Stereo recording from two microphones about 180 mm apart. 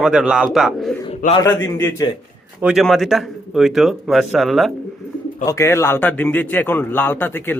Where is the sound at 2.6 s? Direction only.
5° right (ahead or behind).